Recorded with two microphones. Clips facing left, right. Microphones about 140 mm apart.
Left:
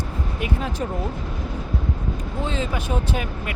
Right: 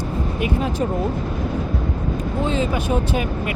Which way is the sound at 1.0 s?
50° right (ahead or behind).